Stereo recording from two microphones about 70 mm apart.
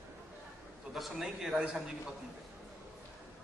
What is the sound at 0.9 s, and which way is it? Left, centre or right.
Speech, centre.